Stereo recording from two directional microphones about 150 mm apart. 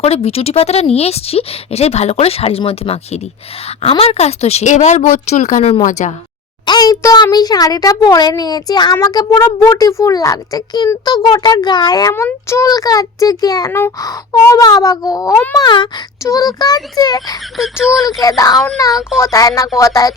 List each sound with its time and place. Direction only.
0.0 s a woman's voice: 40° left (ahead or behind)
6.7 s a child's voice: 25° left (ahead or behind)
17.6 s speech: 5° right (ahead or behind)
18.2 s a child's voice: 25° left (ahead or behind)